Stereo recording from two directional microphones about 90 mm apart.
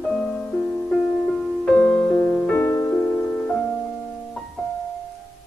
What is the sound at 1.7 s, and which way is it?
Music, 10° left (ahead or behind).